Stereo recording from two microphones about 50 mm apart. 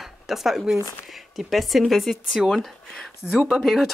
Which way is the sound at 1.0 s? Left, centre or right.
Centre.